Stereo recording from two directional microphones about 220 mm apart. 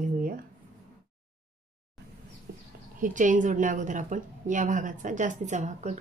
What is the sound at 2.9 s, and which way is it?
A woman's voice, 35° right (ahead or behind).